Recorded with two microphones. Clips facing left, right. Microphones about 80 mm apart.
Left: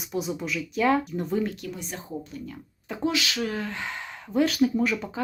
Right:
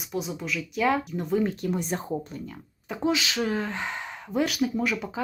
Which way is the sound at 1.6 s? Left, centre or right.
Right.